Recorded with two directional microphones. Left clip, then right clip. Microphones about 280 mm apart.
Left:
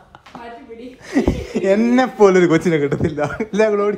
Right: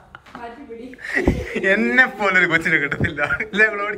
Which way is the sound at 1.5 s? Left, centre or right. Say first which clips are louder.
Left 2 dB; centre.